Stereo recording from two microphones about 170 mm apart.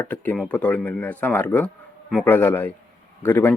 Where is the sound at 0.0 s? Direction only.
10° left (ahead or behind).